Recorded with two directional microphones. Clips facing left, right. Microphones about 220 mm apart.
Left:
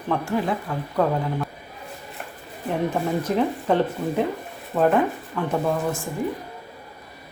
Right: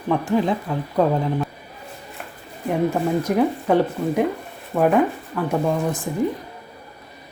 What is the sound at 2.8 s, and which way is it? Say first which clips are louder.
Speech: right 3 dB; 10° right (ahead or behind).